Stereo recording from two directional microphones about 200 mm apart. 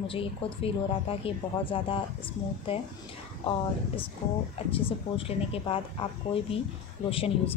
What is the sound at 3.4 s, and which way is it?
A woman's voice, 25° left (ahead or behind).